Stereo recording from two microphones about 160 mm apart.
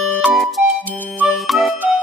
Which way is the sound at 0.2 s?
Centre (ahead or behind).